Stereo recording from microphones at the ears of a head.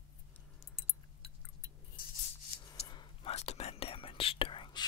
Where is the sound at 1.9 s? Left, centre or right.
Left.